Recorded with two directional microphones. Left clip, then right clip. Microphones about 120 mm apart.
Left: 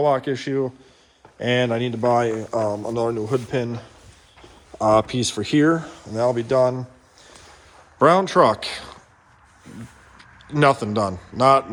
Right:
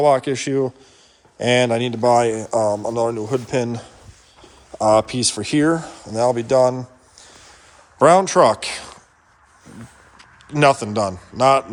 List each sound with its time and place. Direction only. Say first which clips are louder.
0.0 s speech: right 4 dB; 40° right (ahead or behind)
0.4 s speech: right 3 dB; 80° right
1.5 s speech: right 4 dB; 40° right (ahead or behind)
2.0 s speech: right 4 dB; 25° right (ahead or behind)
2.7 s speech: right 3 dB; 20° right (ahead or behind)
3.5 s speech: right 3 dB; 45° right (ahead or behind)
4.8 s speech: right 2 dB; 25° right (ahead or behind); by 6.8 s 50° right (ahead or behind)
7.9 s speech: right 3 dB; 30° right (ahead or behind)
10.5 s speech: right 2 dB; 25° right (ahead or behind)
11.3 s speech: right 2 dB; 45° right (ahead or behind)